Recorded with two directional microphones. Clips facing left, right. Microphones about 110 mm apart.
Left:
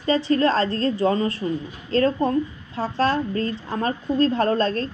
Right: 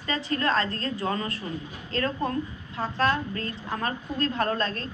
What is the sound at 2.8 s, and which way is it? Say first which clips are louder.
Speech: left 4 dB; 35° left (ahead or behind).